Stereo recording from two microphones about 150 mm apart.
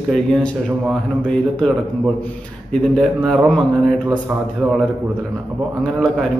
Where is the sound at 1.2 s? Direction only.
10° left (ahead or behind).